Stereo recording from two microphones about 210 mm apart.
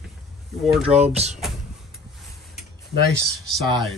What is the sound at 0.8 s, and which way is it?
Speech, 30° right (ahead or behind).